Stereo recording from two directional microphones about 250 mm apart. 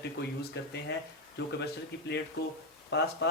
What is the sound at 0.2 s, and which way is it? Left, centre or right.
Speech, left.